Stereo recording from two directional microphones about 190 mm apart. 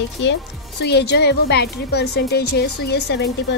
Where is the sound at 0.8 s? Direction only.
60° left (ahead or behind).